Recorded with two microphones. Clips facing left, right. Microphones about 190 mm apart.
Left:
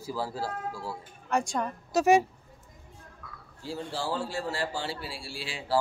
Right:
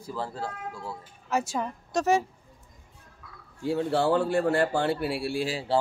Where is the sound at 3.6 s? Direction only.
60° right (ahead or behind).